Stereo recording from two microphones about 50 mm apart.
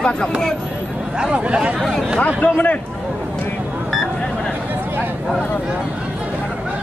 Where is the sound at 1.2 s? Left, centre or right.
Centre.